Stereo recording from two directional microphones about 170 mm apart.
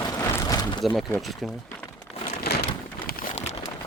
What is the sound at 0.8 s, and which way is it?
Speech, centre (ahead or behind).